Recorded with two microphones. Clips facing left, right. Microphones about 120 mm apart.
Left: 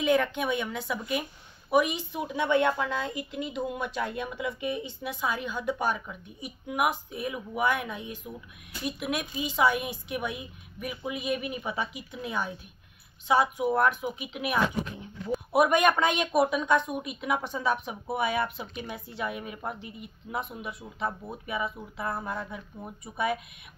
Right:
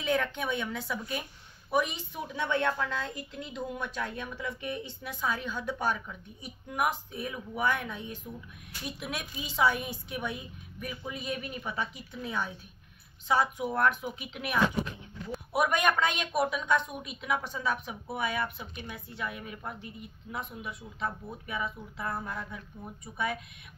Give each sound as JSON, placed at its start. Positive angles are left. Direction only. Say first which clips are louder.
{"t": 0.0, "sound": "a woman's voice", "louder": "left 5 dB", "side_deg": 10}
{"t": 17.5, "sound": "a woman's voice", "louder": "left 4 dB", "side_deg": 20}
{"t": 22.1, "sound": "speech", "louder": "left 3 dB", "side_deg": 25}
{"t": 23.0, "sound": "a woman's voice", "louder": "left 4 dB", "side_deg": 10}